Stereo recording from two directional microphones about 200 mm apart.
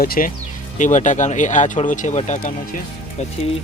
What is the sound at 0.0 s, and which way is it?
Speech, 45° left (ahead or behind).